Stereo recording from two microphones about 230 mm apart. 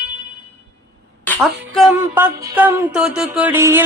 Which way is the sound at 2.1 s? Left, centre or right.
Centre.